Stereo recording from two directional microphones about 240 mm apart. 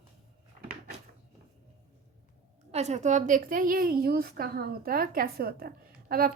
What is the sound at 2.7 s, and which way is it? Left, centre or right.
A woman's voice, right.